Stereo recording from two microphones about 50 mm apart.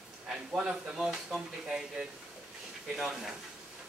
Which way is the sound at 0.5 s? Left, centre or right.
Centre.